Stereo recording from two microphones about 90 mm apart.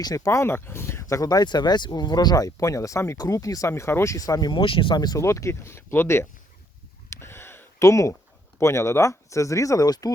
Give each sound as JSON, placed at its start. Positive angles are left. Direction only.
{"t": 0.0, "sound": "speech", "side_deg": 40}
{"t": 3.7, "sound": "speech", "side_deg": 30}
{"t": 4.6, "sound": "speech", "side_deg": 75}
{"t": 5.2, "sound": "speech", "side_deg": 35}
{"t": 7.2, "sound": "gasp", "side_deg": 30}
{"t": 7.9, "sound": "speech", "side_deg": 35}